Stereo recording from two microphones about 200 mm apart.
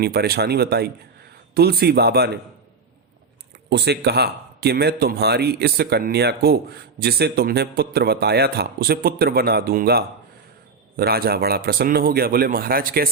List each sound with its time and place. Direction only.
0.0 s a man's voice: 50° right (ahead or behind)
3.7 s a man's voice: 55° right (ahead or behind)